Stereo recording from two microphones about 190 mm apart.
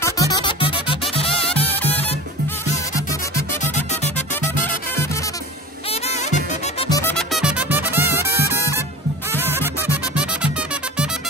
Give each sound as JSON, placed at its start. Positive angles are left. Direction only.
{"t": 0.0, "sound": "music", "side_deg": 20}
{"t": 3.6, "sound": "music", "side_deg": 40}
{"t": 5.9, "sound": "music", "side_deg": 35}
{"t": 6.9, "sound": "music", "side_deg": 15}
{"t": 7.2, "sound": "music", "side_deg": -5}